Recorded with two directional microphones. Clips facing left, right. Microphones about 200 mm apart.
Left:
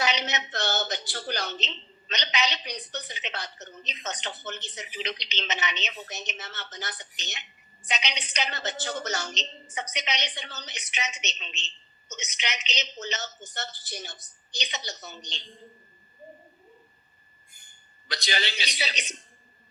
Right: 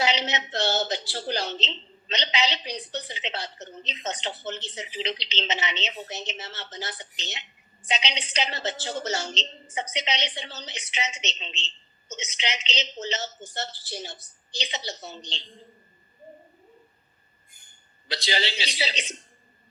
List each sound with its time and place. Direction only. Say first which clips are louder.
0.0 s a sound: right 2 dB; 30° right (ahead or behind)
0.5 s a woman's voice: right 5 dB; 30° right (ahead or behind)
18.1 s a woman's voice: right 3 dB; 30° right (ahead or behind)